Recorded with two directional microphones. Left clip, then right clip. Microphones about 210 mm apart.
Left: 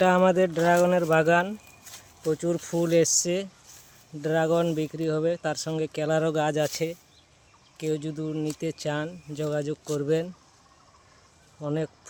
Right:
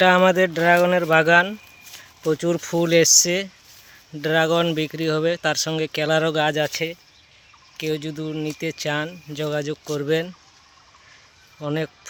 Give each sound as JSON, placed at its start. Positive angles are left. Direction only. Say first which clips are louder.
{"t": 0.0, "sound": "speech", "louder": "right 5 dB", "side_deg": -5}
{"t": 2.2, "sound": "speech", "louder": "right 5 dB", "side_deg": -25}
{"t": 7.8, "sound": "speech", "louder": "right 3 dB", "side_deg": -10}
{"t": 11.6, "sound": "speech", "louder": "right 4 dB", "side_deg": -10}